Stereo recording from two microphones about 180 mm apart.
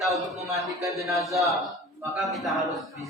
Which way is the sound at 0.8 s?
15° right (ahead or behind).